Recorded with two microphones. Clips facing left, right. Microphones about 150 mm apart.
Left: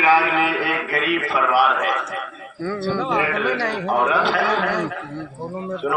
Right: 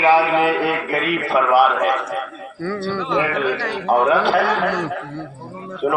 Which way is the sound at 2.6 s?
15° left (ahead or behind).